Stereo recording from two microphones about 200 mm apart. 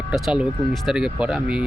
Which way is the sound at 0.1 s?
5° right (ahead or behind).